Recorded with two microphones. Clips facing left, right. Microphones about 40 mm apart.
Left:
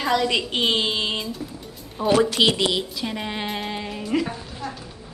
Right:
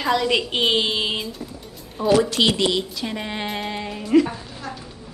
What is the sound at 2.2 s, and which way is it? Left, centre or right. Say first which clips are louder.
Speech: even; centre.